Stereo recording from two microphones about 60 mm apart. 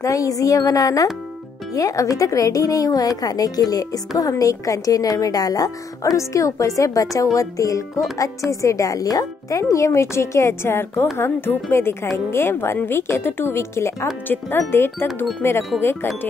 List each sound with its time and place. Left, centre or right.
0.0 s a woman's voice: left
4.2 s a woman's voice: left
6.1 s a woman's voice: left
14.2 s speech: left